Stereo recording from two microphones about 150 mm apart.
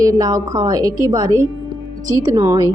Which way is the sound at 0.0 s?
25° right (ahead or behind).